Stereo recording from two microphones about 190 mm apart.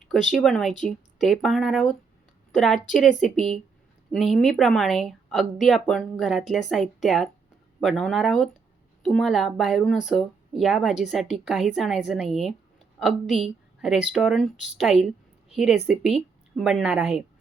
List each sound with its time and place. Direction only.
0.3 s a woman's voice: centre (ahead or behind)